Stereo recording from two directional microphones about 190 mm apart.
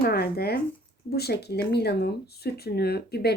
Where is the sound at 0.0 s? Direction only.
55° left (ahead or behind).